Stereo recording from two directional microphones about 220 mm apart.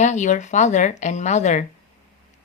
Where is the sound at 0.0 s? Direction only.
35° left (ahead or behind).